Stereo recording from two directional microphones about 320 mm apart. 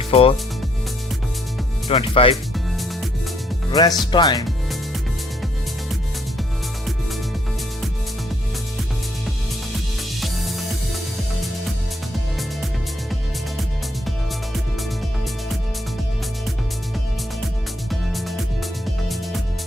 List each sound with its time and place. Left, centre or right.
0.1 s speech: centre
1.9 s speech: centre
2.3 s music: centre
3.7 s speech: centre
10.2 s music: centre
17.8 s music: centre